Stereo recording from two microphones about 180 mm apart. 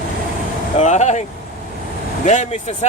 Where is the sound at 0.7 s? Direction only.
40° left (ahead or behind).